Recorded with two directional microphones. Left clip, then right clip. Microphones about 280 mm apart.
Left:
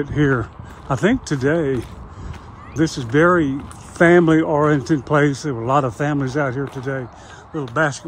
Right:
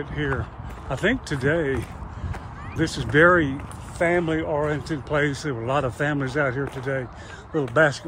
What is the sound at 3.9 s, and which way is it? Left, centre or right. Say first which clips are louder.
Speech: left 9 dB; left.